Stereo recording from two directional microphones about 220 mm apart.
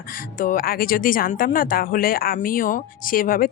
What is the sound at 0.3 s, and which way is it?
Speech, 40° left (ahead or behind).